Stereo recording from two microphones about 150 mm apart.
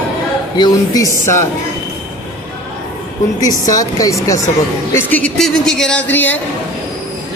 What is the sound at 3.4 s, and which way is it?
Speech, 25° left (ahead or behind).